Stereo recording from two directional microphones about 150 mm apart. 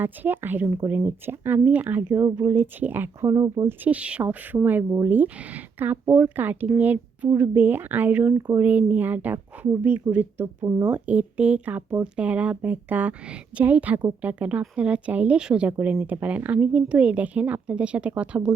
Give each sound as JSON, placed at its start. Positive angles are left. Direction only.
{"t": 0.0, "sound": "speech", "side_deg": -15}
{"t": 10.8, "sound": "speech", "side_deg": -10}